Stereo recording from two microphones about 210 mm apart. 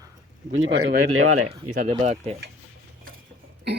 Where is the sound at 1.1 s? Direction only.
90° right.